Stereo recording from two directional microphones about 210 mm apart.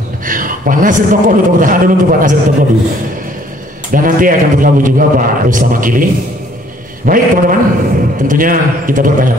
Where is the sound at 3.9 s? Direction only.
40° right (ahead or behind).